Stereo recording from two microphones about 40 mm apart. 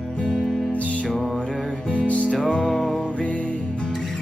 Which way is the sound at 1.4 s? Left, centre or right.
Left.